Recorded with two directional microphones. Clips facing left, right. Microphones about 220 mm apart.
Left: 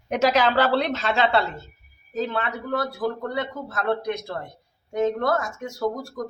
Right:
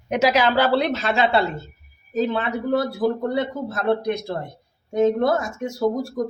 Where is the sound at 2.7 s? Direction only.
30° right (ahead or behind).